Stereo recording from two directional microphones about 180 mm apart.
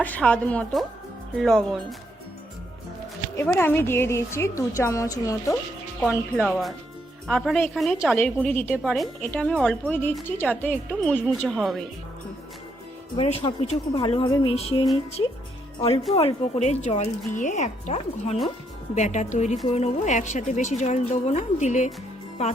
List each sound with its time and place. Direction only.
0.0 s a woman's voice: 5° left (ahead or behind)
3.3 s a woman's voice: 10° left (ahead or behind)
6.0 s a woman's voice: centre (ahead or behind)
13.1 s speech: 30° left (ahead or behind)
16.1 s speech: 35° left (ahead or behind)